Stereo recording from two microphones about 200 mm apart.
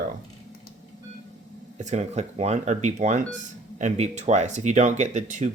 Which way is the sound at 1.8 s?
35° right (ahead or behind).